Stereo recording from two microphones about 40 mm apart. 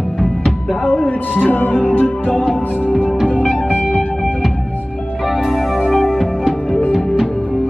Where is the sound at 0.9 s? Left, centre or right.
Left.